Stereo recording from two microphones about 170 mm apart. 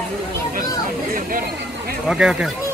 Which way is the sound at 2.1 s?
5° right (ahead or behind).